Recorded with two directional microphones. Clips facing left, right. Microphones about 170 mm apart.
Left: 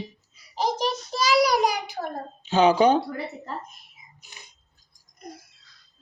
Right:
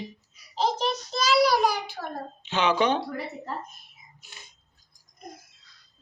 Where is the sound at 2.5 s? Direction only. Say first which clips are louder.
Left 6 dB; 35° left (ahead or behind).